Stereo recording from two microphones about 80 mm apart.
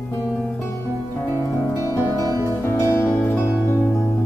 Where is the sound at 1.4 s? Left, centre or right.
Left.